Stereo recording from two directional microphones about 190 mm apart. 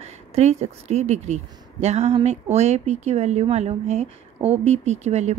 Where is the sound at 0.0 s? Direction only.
35° right (ahead or behind).